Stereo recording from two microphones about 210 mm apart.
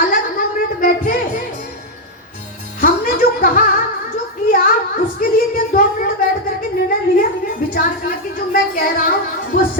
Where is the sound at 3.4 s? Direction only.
45° left (ahead or behind).